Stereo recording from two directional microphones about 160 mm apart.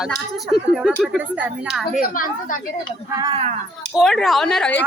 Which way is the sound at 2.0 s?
60° left (ahead or behind).